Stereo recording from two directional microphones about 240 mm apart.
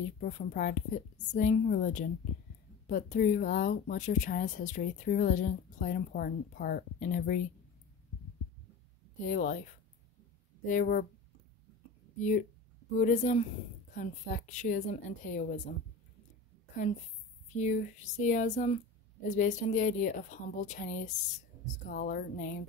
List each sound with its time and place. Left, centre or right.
0.2 s speech: left
9.2 s speech: left
10.6 s speech: left
12.9 s speech: left
17.6 s speech: left